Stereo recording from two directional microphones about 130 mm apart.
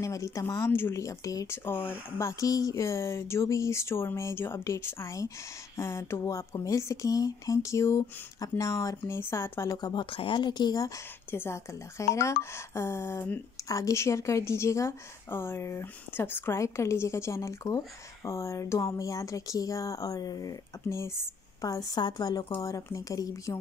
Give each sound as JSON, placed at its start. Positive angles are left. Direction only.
{"t": 0.0, "sound": "a woman's voice", "side_deg": 25}
{"t": 9.8, "sound": "speech", "side_deg": 30}
{"t": 11.2, "sound": "a woman's voice", "side_deg": 20}